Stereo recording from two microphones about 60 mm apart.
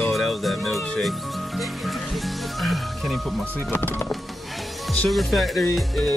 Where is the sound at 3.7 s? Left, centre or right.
Left.